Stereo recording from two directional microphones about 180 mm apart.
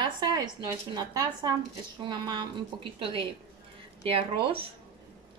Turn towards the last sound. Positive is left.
turn(degrees=-30)  # may be behind; listen again after turning